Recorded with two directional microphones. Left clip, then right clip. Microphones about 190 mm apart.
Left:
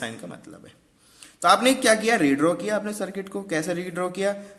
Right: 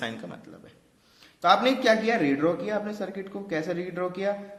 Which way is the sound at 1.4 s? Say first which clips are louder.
Left 2 dB; 45° left (ahead or behind).